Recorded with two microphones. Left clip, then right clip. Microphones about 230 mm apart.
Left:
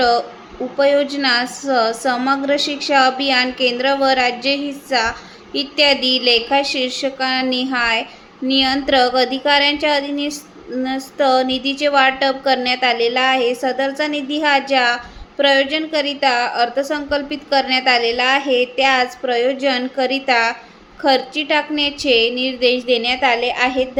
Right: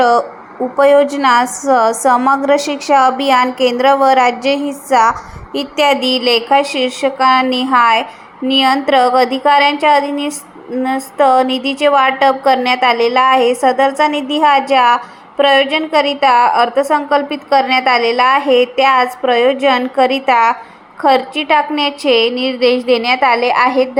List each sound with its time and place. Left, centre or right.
0.0 s a woman's voice: centre
11.5 s a woman's voice: left
11.8 s a woman's voice: centre